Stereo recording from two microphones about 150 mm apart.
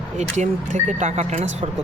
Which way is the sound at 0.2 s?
55° right (ahead or behind).